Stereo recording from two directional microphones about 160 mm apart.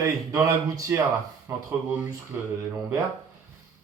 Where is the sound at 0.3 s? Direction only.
20° right (ahead or behind).